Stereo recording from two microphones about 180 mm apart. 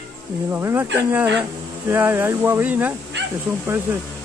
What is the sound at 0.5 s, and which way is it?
Speech, 15° right (ahead or behind).